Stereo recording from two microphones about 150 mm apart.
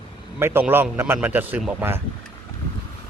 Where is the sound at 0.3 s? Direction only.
15° right (ahead or behind).